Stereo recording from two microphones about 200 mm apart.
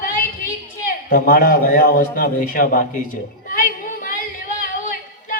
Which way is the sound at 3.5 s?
45° left (ahead or behind).